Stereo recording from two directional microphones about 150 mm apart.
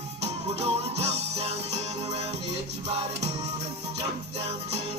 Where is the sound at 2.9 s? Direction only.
40° right (ahead or behind).